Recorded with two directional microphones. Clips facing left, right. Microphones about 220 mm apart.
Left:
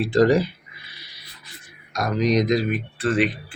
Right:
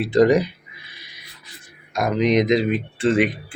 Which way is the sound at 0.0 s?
20° right (ahead or behind).